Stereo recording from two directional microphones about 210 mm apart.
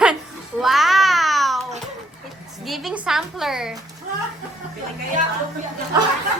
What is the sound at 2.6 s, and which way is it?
A woman's voice, centre (ahead or behind).